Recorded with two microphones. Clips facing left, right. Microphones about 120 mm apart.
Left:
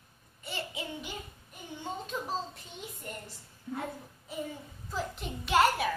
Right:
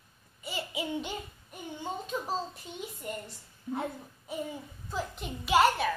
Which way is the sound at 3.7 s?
25° right (ahead or behind).